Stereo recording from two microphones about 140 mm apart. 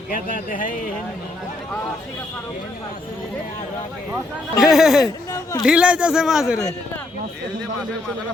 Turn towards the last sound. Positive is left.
turn(degrees=20)  # may be behind; listen again after turning